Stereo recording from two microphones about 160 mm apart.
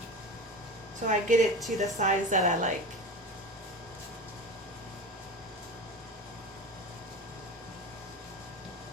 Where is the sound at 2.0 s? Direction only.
50° right (ahead or behind).